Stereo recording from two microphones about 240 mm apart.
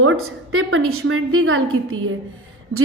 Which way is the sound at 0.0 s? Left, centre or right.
Right.